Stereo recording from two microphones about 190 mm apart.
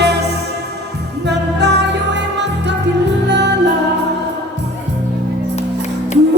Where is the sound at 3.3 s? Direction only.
65° right (ahead or behind).